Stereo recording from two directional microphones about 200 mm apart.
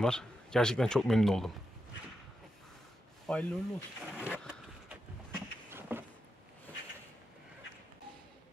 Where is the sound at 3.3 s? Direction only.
5° left (ahead or behind).